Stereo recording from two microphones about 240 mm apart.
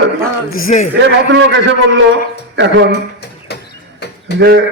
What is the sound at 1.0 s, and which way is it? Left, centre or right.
Speech, right.